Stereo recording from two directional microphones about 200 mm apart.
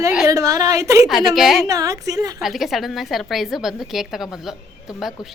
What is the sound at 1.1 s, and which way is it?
Speech, centre (ahead or behind).